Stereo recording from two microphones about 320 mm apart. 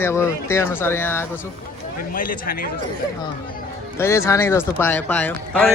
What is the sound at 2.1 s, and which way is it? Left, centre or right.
Speech, left.